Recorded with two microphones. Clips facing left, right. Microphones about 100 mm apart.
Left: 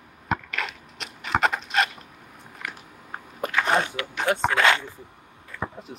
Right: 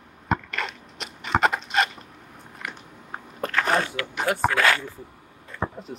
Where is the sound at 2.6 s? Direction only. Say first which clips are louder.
Even; 5° right (ahead or behind).